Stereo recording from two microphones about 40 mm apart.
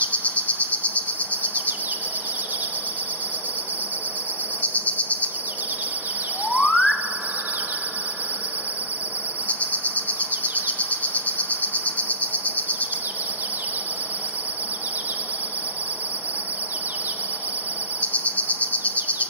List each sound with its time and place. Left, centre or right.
0.0 s insect: left
4.6 s cricket: left
6.5 s chirp tone: left
9.5 s cricket: left
10.8 s rattle: left
18.0 s cricket: left